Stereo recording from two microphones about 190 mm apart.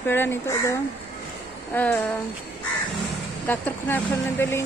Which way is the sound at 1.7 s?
10° left (ahead or behind).